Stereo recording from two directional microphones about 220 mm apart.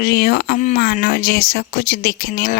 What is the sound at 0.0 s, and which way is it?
Speech, 45° left (ahead or behind).